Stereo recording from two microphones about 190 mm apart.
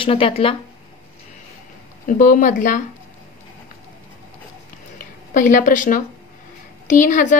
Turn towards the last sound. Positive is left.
turn(degrees=40)  # may be behind; listen again after turning